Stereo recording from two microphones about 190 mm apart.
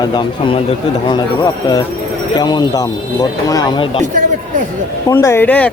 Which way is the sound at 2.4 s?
20° left (ahead or behind).